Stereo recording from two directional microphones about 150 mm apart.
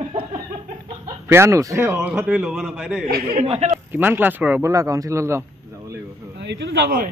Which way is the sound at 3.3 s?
45° right (ahead or behind).